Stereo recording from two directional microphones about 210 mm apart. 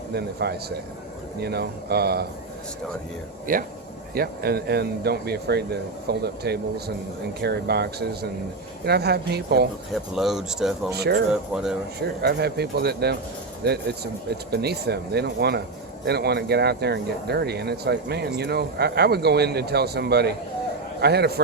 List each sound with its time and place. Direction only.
0.1 s speech: 50° right (ahead or behind)
3.5 s speech: 40° right (ahead or behind)
9.9 s speech: centre (ahead or behind)
10.9 s speech: 50° right (ahead or behind)
11.3 s speech: centre (ahead or behind)
12.2 s speech: 50° right (ahead or behind)